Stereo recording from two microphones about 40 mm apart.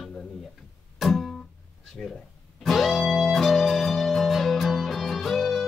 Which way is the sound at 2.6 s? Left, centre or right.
Centre.